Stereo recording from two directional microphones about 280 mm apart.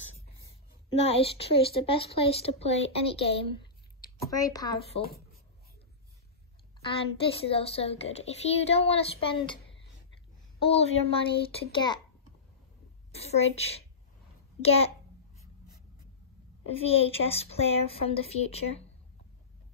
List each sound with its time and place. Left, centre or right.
1.1 s a woman's voice: left
7.4 s a woman's voice: left
13.1 s a woman's voice: left
16.6 s a woman's voice: left